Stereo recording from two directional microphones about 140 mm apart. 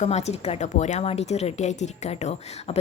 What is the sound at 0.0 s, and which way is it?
A woman's voice, 50° left (ahead or behind).